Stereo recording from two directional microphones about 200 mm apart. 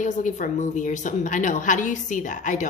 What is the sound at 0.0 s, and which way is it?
Speech, 40° left (ahead or behind).